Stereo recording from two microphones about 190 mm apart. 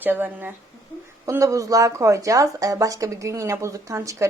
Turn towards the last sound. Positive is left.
turn(degrees=-15)  # may be behind; listen again after turning